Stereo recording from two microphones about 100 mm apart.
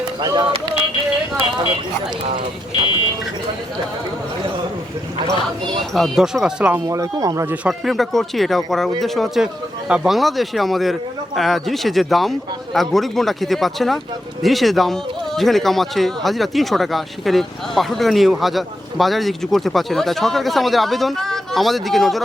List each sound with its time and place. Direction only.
0.2 s speech: 45° right (ahead or behind)
2.8 s speech: 60° left (ahead or behind)
5.9 s speech: centre (ahead or behind)
6.8 s speech: 35° right (ahead or behind)
7.7 s speech: centre (ahead or behind)